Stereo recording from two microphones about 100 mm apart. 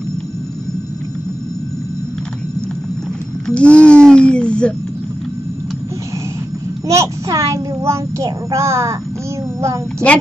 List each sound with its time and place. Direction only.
3.4 s speech: 10° left (ahead or behind)
6.9 s a child's voice: 30° right (ahead or behind)